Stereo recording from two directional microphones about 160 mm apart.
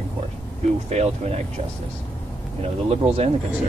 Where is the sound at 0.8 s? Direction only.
40° right (ahead or behind).